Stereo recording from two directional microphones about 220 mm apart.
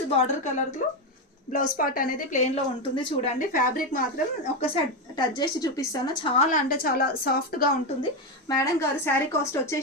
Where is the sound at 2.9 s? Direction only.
20° left (ahead or behind).